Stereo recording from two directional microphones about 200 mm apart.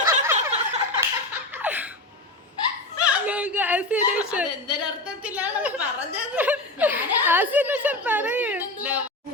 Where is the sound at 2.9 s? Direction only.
5° right (ahead or behind).